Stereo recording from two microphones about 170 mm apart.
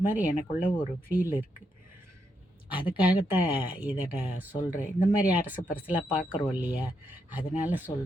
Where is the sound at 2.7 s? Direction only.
30° left (ahead or behind).